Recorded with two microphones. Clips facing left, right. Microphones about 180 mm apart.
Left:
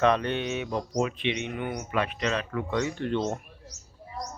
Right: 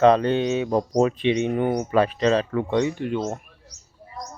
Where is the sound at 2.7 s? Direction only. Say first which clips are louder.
Right 4 dB; 20° right (ahead or behind).